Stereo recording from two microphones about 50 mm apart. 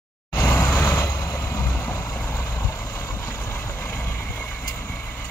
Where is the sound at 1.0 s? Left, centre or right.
Left.